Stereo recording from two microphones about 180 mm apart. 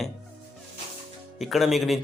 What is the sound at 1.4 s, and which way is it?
Speech, centre (ahead or behind).